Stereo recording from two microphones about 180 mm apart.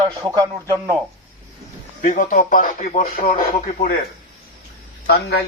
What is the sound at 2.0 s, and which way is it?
A man's voice, 50° left (ahead or behind).